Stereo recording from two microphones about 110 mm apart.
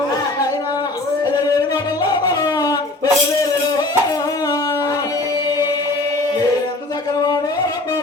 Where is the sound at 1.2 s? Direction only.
35° left (ahead or behind).